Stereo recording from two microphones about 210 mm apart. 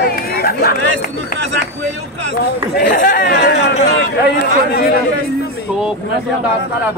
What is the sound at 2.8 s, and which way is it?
Chatter, 40° left (ahead or behind).